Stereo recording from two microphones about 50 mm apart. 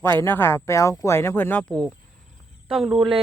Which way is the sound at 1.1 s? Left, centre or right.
Left.